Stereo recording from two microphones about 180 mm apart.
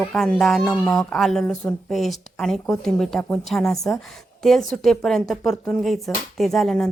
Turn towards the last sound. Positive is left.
turn(degrees=0)  # may be behind; listen again after turning